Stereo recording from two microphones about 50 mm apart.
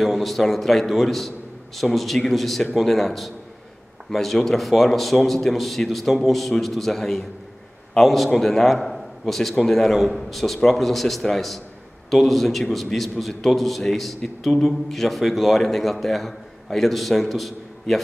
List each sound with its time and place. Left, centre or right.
0.0 s a man's voice: centre